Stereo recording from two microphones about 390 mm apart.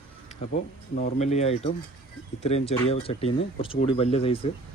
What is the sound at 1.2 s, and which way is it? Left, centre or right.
Speech, centre.